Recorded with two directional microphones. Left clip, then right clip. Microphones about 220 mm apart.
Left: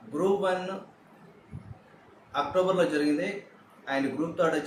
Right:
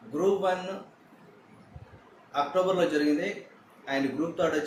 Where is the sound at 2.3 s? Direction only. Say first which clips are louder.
Even; 5° left (ahead or behind).